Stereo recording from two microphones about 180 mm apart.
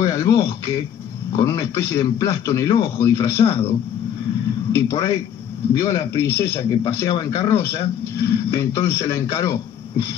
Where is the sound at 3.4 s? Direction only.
30° left (ahead or behind).